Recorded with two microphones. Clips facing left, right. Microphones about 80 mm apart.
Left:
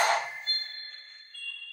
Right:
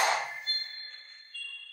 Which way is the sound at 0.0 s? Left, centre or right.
Left.